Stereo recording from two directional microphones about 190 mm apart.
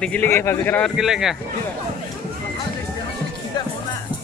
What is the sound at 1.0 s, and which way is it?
Speech, centre (ahead or behind).